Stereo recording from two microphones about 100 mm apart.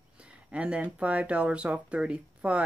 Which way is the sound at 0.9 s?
10° right (ahead or behind).